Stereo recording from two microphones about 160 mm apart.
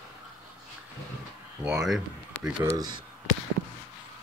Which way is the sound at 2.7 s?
25° right (ahead or behind).